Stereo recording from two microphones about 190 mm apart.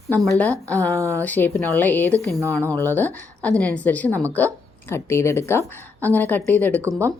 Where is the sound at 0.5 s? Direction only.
15° right (ahead or behind).